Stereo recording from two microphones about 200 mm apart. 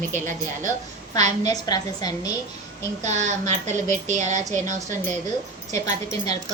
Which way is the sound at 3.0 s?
35° right (ahead or behind).